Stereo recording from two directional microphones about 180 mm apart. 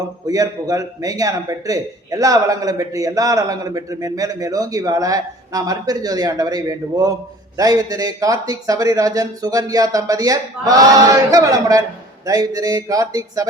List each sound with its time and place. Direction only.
0.3 s a man's voice: 20° right (ahead or behind)